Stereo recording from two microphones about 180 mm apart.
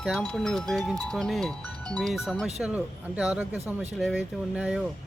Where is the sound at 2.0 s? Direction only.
Centre (ahead or behind).